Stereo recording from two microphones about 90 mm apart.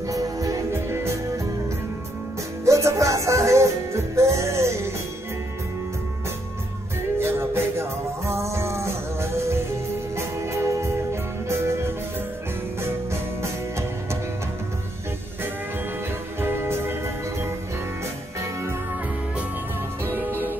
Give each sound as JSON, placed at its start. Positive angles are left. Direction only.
{"t": 0.1, "sound": "music", "side_deg": -40}
{"t": 2.6, "sound": "music", "side_deg": -35}
{"t": 7.2, "sound": "music", "side_deg": -25}
{"t": 16.3, "sound": "music", "side_deg": -25}
{"t": 20.1, "sound": "music", "side_deg": -25}